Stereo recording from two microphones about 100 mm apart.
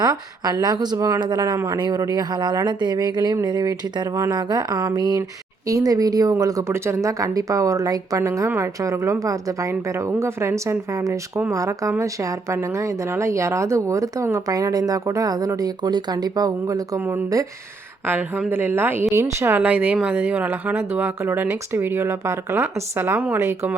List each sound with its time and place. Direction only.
0.0 s speech: 40° right (ahead or behind)
0.9 s speech: 30° right (ahead or behind)
18.0 s speech: 20° right (ahead or behind)